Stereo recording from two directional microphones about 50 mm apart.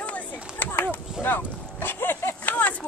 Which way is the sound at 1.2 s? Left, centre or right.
Left.